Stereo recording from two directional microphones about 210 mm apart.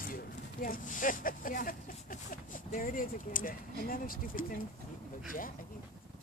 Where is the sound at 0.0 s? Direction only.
40° left (ahead or behind).